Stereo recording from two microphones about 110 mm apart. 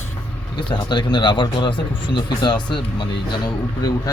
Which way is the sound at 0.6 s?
45° left (ahead or behind).